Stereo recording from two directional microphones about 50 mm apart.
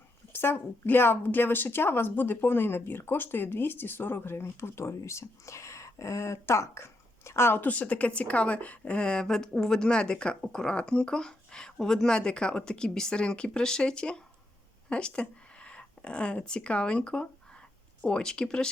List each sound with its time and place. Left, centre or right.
0.3 s speech: left
6.5 s speech: left
7.6 s a woman's voice: left